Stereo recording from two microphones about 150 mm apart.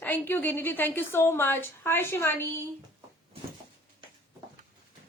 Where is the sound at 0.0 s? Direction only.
10° left (ahead or behind).